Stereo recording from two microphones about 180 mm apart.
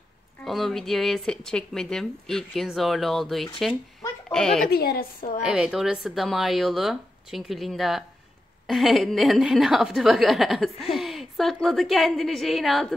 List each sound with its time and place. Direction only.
0.4 s speech: centre (ahead or behind)
4.6 s a woman's voice: 60° left (ahead or behind)
5.4 s speech: 5° right (ahead or behind)